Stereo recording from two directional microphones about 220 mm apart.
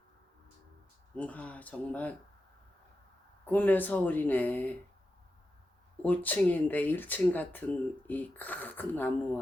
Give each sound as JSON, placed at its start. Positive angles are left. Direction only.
{"t": 1.1, "sound": "speech", "side_deg": 5}
{"t": 3.4, "sound": "speech", "side_deg": 5}
{"t": 6.0, "sound": "speech", "side_deg": 5}